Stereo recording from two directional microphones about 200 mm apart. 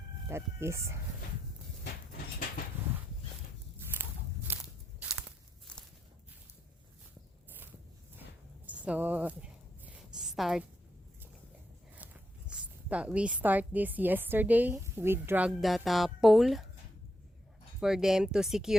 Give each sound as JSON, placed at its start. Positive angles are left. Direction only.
{"t": 0.3, "sound": "a woman's voice", "side_deg": -15}
{"t": 3.9, "sound": "biting", "side_deg": -10}
{"t": 4.5, "sound": "walk", "side_deg": -10}
{"t": 5.7, "sound": "walk", "side_deg": 5}
{"t": 8.6, "sound": "a sound", "side_deg": -5}
{"t": 12.5, "sound": "a woman's voice", "side_deg": -5}
{"t": 17.7, "sound": "speech", "side_deg": 0}